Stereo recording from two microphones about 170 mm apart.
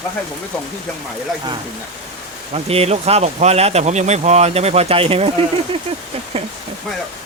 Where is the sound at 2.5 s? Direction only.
35° right (ahead or behind).